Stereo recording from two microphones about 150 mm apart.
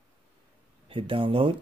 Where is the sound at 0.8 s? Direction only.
35° right (ahead or behind).